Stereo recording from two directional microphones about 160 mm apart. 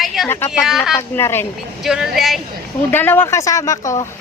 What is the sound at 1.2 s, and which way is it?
Speech, 15° left (ahead or behind).